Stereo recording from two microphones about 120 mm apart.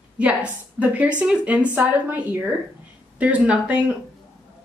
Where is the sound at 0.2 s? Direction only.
10° right (ahead or behind).